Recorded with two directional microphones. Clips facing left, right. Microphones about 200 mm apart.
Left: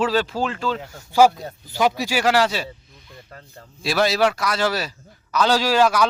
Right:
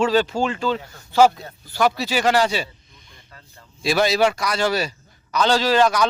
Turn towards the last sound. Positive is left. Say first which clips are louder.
# even
turn(degrees=5)  # may be behind; listen again after turning